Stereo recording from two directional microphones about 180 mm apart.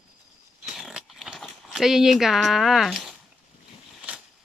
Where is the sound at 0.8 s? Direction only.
Centre (ahead or behind).